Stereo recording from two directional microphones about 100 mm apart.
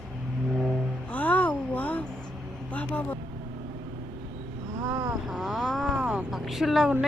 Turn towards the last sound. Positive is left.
turn(degrees=0)  # may be behind; listen again after turning